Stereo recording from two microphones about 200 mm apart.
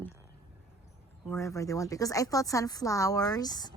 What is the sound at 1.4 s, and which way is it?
Speech, 15° left (ahead or behind).